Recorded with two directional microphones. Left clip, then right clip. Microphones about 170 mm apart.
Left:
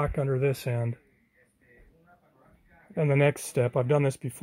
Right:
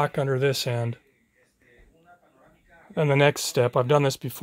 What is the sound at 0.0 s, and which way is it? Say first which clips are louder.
Speech: right 4 dB; 10° right (ahead or behind).